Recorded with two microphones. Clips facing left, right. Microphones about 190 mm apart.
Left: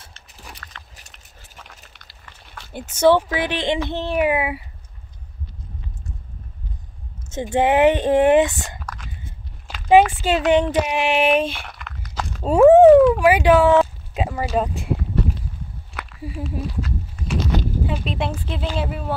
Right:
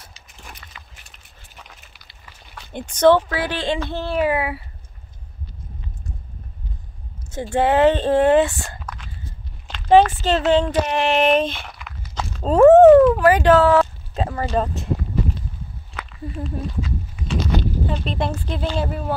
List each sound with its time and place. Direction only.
0.4 s dog: centre (ahead or behind)
0.9 s biting: 40° left (ahead or behind)
1.6 s speech: centre (ahead or behind); by 4.6 s 15° left (ahead or behind)
7.2 s speech: 20° left (ahead or behind)
8.7 s whispering: centre (ahead or behind)
9.7 s speech: 10° left (ahead or behind)
11.7 s a sound: centre (ahead or behind)
12.8 s a sound: centre (ahead or behind)
13.3 s speech: 10° left (ahead or behind)
15.9 s walk: 5° left (ahead or behind)
17.8 s speech: 5° left (ahead or behind)